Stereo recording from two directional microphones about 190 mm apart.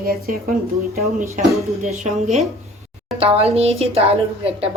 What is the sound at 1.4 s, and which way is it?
Speech, 40° right (ahead or behind).